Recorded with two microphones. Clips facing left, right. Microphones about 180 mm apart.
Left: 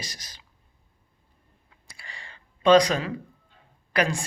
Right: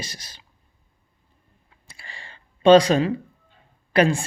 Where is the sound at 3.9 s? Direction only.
25° right (ahead or behind).